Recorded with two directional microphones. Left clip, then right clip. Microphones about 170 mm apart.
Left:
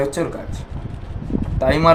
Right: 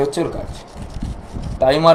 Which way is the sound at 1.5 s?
75° left (ahead or behind).